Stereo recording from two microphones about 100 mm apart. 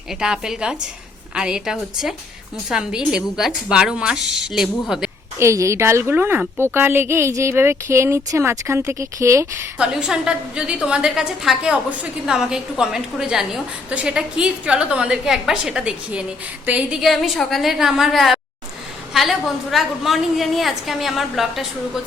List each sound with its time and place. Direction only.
0.1 s a woman's voice: 5° right (ahead or behind)
5.4 s a woman's voice: 30° right (ahead or behind)
9.7 s a woman's voice: 10° right (ahead or behind)
17.0 s a woman's voice: centre (ahead or behind)